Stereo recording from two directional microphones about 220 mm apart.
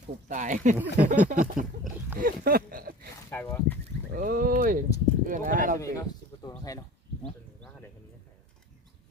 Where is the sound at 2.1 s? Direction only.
40° right (ahead or behind).